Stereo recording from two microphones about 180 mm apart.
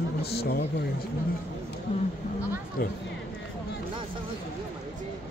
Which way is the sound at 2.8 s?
55° left (ahead or behind).